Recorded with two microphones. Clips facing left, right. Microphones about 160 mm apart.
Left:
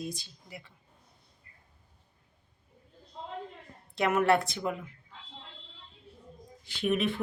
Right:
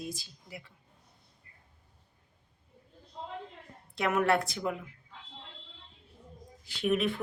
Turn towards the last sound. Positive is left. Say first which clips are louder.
# even
turn(degrees=0)  # may be behind; listen again after turning